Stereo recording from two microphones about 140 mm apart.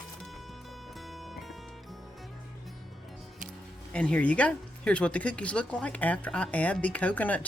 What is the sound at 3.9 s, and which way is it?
Speech, 10° left (ahead or behind).